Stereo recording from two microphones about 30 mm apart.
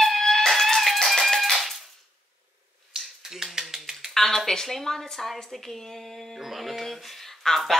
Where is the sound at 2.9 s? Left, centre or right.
Centre.